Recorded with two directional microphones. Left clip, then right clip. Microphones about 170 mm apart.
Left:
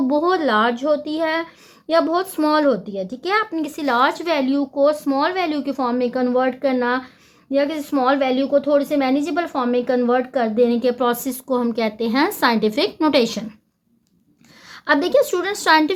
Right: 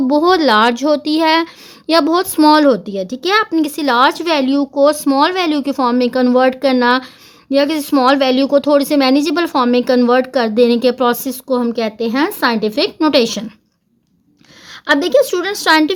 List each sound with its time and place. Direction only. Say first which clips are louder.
0.1 s a woman's voice: right 8 dB; 35° right (ahead or behind)
14.7 s a woman's voice: right 4 dB; 25° right (ahead or behind)